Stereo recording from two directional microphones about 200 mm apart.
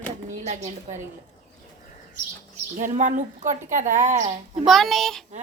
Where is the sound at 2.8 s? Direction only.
40° right (ahead or behind).